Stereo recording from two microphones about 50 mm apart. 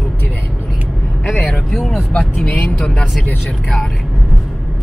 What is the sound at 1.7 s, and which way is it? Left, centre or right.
Speech, centre.